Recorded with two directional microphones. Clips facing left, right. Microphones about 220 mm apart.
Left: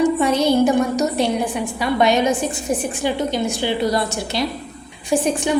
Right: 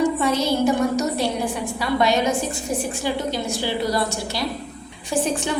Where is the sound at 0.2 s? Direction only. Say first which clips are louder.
Left 4 dB; 20° left (ahead or behind).